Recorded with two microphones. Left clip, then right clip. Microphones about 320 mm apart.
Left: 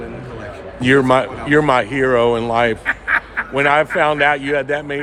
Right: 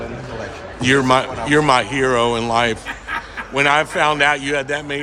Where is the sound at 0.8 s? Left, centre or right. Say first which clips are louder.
Left 2 dB; centre.